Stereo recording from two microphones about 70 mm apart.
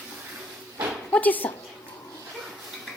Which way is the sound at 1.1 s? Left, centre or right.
Left.